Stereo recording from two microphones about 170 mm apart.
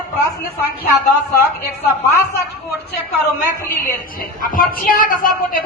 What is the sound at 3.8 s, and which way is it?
A woman's voice, 55° left (ahead or behind).